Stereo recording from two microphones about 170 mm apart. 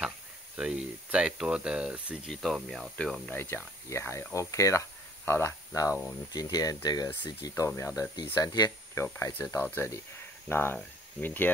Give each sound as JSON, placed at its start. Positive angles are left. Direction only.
{"t": 0.6, "sound": "speech", "side_deg": -5}